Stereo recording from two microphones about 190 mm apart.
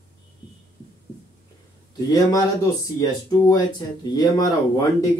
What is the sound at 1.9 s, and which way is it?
Speech, 20° left (ahead or behind).